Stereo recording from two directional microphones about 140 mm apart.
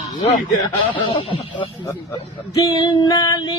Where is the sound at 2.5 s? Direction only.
25° left (ahead or behind).